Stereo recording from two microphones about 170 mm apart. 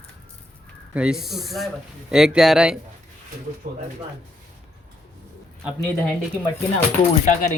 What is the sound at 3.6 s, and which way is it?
Speech, 65° right (ahead or behind).